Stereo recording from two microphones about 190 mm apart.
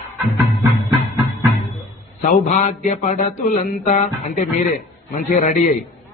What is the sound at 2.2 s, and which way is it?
Mantra, 45° left (ahead or behind).